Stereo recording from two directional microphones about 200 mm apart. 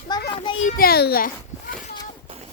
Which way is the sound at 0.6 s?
50° left (ahead or behind).